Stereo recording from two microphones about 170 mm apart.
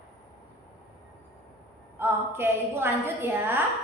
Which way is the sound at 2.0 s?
15° right (ahead or behind).